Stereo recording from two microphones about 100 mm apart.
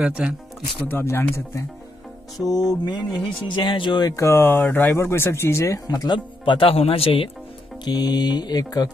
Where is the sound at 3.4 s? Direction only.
50° left (ahead or behind).